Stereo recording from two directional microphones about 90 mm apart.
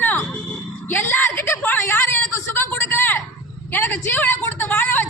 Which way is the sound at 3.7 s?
25° left (ahead or behind).